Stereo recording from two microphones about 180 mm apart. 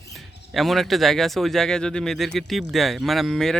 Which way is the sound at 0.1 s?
Centre (ahead or behind).